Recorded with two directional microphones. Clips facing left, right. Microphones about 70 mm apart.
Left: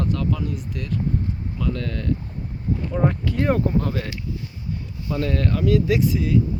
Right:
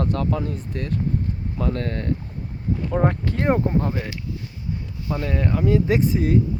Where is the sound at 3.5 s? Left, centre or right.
Right.